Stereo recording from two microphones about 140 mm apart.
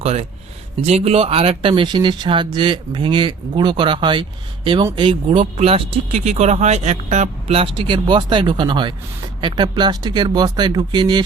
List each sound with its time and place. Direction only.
0.0 s speech: 50° right (ahead or behind)
7.8 s speech: 35° right (ahead or behind)